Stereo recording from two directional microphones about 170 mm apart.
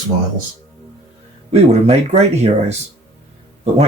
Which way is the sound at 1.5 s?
40° right (ahead or behind).